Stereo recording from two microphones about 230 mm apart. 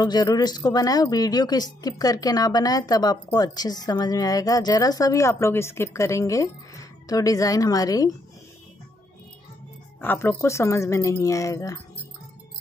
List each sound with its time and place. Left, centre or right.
0.0 s speech: centre
9.9 s speech: centre